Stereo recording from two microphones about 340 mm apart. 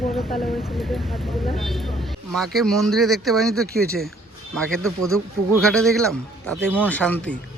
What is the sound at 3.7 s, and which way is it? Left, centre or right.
Speech, right.